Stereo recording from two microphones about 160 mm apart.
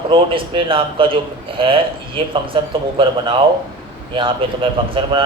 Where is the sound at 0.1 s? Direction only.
30° right (ahead or behind).